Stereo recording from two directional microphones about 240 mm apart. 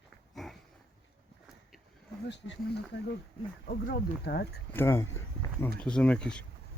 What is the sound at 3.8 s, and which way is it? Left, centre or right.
Speech, left.